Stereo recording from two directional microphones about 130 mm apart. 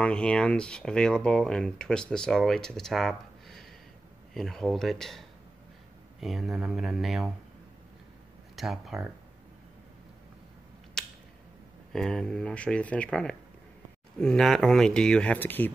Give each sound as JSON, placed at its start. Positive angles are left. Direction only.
{"t": 0.0, "sound": "speech", "side_deg": 10}
{"t": 6.2, "sound": "speech", "side_deg": 0}
{"t": 8.5, "sound": "speech", "side_deg": 0}
{"t": 11.0, "sound": "a sound", "side_deg": 5}
{"t": 11.9, "sound": "speech", "side_deg": 5}